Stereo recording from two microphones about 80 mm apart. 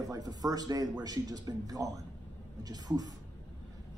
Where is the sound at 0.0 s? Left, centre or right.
Right.